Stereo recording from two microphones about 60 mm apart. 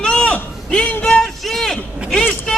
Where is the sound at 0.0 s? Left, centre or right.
Centre.